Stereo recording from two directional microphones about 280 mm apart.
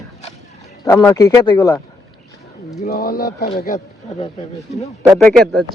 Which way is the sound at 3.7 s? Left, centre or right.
Left.